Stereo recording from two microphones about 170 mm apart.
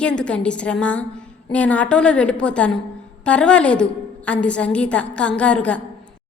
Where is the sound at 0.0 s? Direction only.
5° left (ahead or behind).